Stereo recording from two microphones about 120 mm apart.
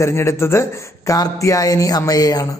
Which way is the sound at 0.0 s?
25° left (ahead or behind).